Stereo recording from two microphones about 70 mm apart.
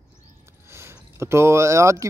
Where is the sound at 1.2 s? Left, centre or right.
Right.